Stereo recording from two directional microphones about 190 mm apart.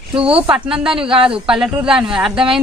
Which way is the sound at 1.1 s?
25° right (ahead or behind).